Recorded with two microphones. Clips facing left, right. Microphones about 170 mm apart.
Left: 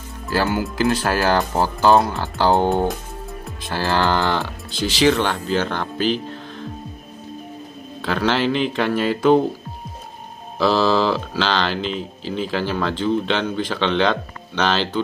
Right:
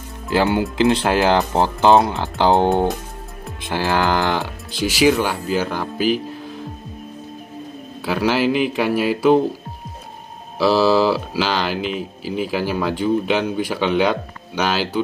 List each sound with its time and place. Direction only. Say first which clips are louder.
0.3 s speech: right 3 dB; 20° right (ahead or behind)
8.0 s speech: right 1 dB; 10° right (ahead or behind)
10.6 s speech: right 2 dB; 5° right (ahead or behind)